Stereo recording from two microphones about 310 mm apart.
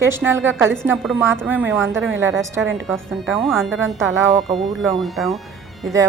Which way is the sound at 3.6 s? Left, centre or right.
Right.